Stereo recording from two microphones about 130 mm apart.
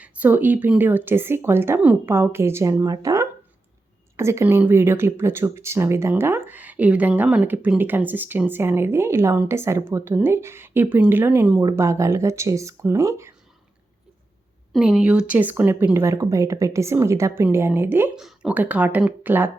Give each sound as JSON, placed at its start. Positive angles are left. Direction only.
{"t": 0.0, "sound": "speech", "side_deg": -15}
{"t": 11.6, "sound": "speech", "side_deg": -25}
{"t": 14.7, "sound": "speech", "side_deg": -5}
{"t": 18.2, "sound": "speech", "side_deg": -5}